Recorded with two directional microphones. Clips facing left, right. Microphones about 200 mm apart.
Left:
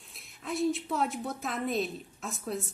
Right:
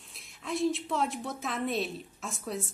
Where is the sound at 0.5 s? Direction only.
Centre (ahead or behind).